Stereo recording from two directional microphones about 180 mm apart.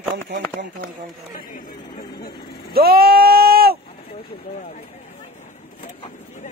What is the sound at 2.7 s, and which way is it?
Bleat, 60° right (ahead or behind).